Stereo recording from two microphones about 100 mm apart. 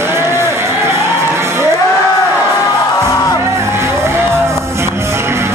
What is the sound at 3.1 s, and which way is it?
Music, 35° left (ahead or behind).